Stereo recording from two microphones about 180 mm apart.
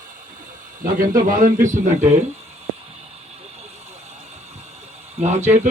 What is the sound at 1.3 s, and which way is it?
Speech, 50° right (ahead or behind).